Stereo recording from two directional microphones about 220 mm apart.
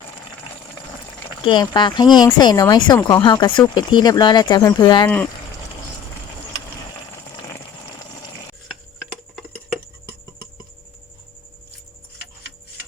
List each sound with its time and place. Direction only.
1.5 s speech: 20° left (ahead or behind)
5.0 s speech: 10° left (ahead or behind)
7.3 s a sound: 15° left (ahead or behind)